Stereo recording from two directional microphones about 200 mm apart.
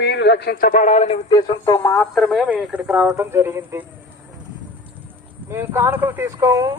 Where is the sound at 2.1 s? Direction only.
Centre (ahead or behind).